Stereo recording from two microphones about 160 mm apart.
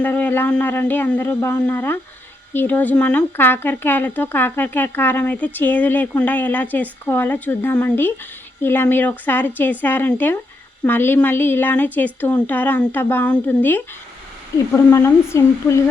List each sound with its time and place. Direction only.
0.0 s speech: 10° left (ahead or behind)